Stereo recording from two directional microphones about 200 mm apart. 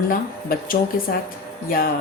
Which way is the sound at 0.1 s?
45° left (ahead or behind).